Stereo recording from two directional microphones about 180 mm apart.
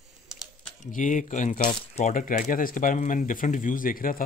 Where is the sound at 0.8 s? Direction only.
45° left (ahead or behind).